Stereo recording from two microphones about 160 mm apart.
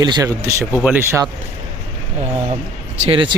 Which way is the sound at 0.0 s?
25° right (ahead or behind).